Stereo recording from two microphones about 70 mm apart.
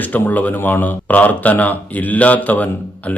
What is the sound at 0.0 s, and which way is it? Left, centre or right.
Speech, left.